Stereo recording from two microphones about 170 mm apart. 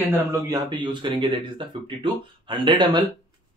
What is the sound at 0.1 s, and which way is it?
Speech, 20° right (ahead or behind).